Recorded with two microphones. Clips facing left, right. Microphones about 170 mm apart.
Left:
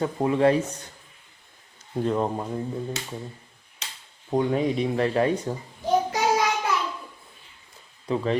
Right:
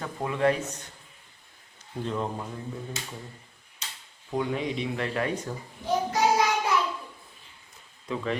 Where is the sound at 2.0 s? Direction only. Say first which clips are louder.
Left 6 dB; 45° left (ahead or behind).